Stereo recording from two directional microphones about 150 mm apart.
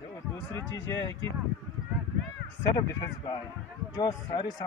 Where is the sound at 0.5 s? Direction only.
15° left (ahead or behind).